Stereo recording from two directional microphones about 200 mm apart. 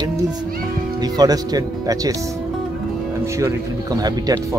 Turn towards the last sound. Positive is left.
turn(degrees=-20)  # may be behind; listen again after turning